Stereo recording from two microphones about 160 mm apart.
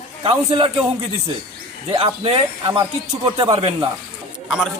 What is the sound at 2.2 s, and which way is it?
Speech, 35° right (ahead or behind).